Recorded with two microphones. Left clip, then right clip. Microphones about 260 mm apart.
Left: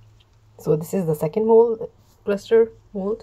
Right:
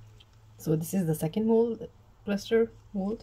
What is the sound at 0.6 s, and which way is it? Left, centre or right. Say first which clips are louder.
Speech: left 9 dB; centre.